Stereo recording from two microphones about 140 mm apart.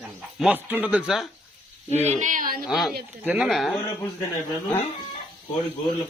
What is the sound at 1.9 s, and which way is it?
Speech, 55° right (ahead or behind).